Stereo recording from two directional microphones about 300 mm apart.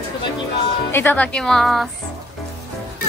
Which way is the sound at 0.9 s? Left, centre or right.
Centre.